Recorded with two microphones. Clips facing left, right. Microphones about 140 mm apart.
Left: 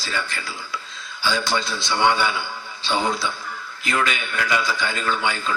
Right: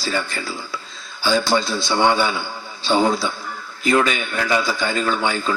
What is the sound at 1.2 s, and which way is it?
A man's voice, 35° right (ahead or behind).